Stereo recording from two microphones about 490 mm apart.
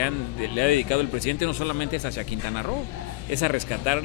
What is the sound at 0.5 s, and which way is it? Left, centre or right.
Speech, left.